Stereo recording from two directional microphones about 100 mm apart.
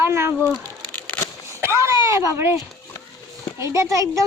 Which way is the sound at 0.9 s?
15° left (ahead or behind).